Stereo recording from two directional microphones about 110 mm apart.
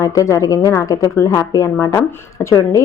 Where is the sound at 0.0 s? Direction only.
30° left (ahead or behind).